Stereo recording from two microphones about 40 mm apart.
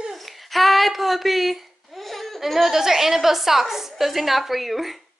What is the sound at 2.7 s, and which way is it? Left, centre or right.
A woman's voice, centre.